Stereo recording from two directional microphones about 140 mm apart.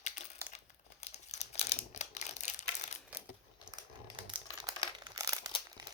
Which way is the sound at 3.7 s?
35° right (ahead or behind).